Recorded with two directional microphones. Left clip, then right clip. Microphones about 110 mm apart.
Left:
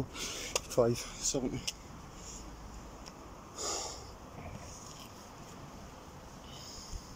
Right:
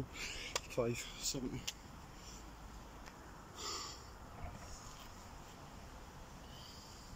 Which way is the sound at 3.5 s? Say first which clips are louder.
Left 7 dB; 45° right (ahead or behind).